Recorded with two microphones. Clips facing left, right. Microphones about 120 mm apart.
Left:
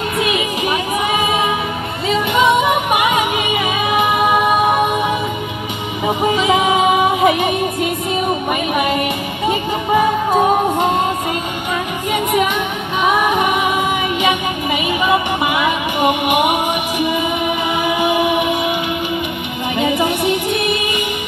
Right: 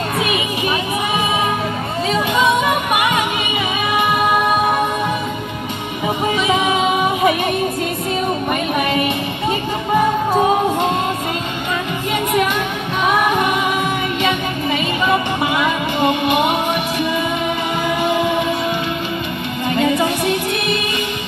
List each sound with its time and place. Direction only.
2.4 s music: 10° left (ahead or behind)
6.0 s music: 15° left (ahead or behind)
12.1 s music: 10° left (ahead or behind)
15.0 s music: 15° left (ahead or behind)
17.8 s music: 15° left (ahead or behind)
19.8 s music: 15° left (ahead or behind)